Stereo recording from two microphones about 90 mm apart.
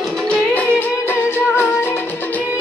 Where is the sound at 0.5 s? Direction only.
20° left (ahead or behind).